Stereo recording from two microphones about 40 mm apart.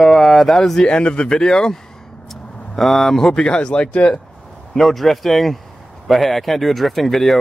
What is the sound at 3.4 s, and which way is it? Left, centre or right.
Speech, left.